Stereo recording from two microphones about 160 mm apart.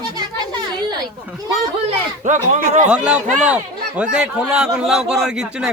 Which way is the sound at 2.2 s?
50° right (ahead or behind).